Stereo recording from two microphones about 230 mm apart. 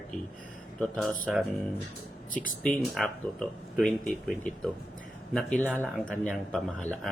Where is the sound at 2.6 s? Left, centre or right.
Centre.